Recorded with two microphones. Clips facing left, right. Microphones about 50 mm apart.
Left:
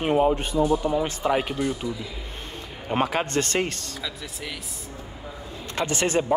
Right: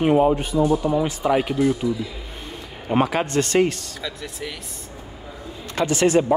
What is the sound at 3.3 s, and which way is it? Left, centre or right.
Speech, left.